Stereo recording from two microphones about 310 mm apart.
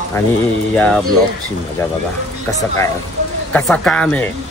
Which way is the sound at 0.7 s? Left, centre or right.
Centre.